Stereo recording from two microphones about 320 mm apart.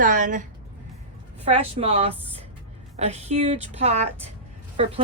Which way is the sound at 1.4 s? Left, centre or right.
Centre.